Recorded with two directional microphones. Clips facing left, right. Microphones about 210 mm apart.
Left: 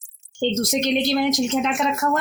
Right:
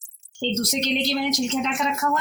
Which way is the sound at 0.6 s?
50° left (ahead or behind).